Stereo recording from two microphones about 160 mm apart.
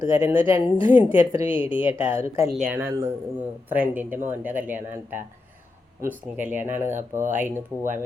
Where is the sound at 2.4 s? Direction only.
5° right (ahead or behind).